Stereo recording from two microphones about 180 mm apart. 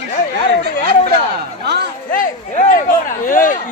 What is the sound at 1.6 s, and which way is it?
Speech, 65° right (ahead or behind).